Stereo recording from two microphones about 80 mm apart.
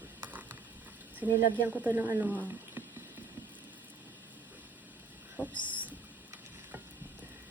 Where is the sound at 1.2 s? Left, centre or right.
Centre.